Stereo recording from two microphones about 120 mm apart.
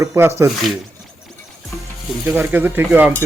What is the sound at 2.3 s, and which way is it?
Speech, 15° right (ahead or behind).